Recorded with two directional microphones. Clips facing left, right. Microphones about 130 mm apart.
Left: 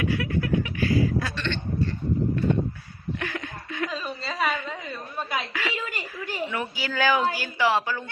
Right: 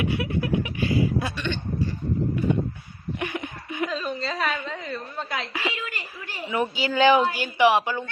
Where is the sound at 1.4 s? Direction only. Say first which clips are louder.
Even; 10° right (ahead or behind).